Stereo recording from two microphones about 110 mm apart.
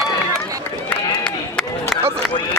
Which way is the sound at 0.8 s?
10° left (ahead or behind).